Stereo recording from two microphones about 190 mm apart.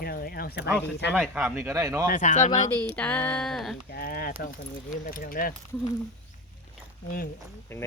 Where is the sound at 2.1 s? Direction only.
40° left (ahead or behind).